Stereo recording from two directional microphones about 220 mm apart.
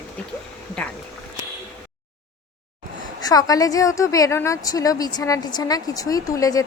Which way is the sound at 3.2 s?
15° left (ahead or behind).